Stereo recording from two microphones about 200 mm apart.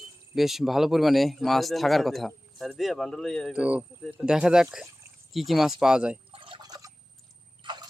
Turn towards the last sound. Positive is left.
turn(degrees=-25)  # may be behind; listen again after turning